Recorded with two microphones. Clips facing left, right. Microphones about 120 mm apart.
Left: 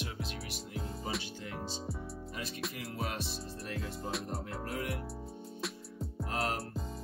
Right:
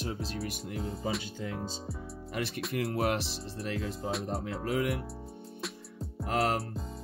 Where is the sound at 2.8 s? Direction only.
65° right (ahead or behind); by 3.8 s 80° right.